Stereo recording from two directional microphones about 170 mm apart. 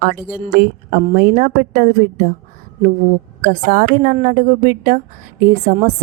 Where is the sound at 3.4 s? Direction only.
55° right (ahead or behind).